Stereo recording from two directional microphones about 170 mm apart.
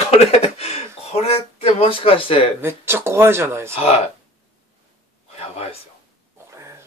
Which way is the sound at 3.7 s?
35° left (ahead or behind).